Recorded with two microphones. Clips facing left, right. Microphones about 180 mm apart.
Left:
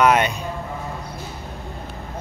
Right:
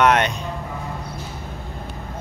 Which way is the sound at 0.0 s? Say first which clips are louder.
Even; 5° left (ahead or behind).